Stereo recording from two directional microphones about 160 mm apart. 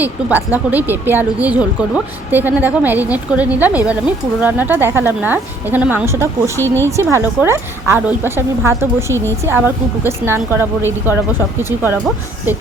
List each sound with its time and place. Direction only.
0.0 s a woman's voice: 10° right (ahead or behind)
6.6 s speech: 15° left (ahead or behind)
6.9 s a woman's voice: 15° right (ahead or behind)